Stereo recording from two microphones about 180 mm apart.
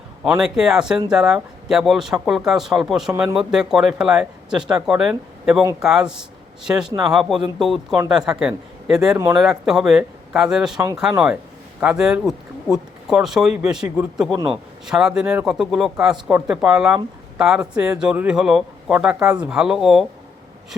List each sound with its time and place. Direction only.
0.3 s speech: centre (ahead or behind)
9.1 s speech: 15° right (ahead or behind)
9.4 s speech: centre (ahead or behind)